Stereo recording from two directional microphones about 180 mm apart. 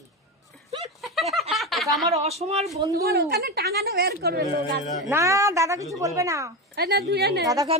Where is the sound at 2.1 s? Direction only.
35° right (ahead or behind).